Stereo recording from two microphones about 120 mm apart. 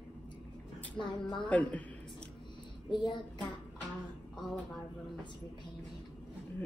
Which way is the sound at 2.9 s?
40° left (ahead or behind).